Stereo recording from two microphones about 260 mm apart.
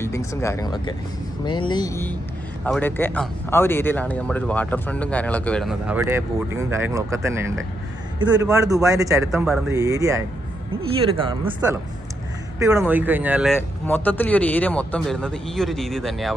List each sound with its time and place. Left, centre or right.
0.0 s speech: centre
9.3 s speech: centre
9.7 s speech: centre
13.6 s speech: centre